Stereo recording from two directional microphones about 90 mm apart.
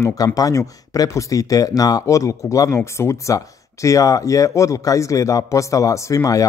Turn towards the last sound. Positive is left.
turn(degrees=40)  # may be behind; listen again after turning